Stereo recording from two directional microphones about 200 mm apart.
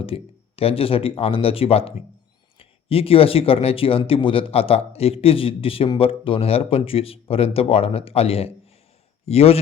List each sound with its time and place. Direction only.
0.0 s speech: 30° left (ahead or behind)